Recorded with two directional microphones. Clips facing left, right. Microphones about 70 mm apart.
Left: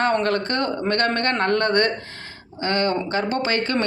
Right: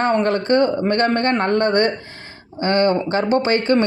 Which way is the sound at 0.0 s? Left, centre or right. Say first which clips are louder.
Right 3 dB; right.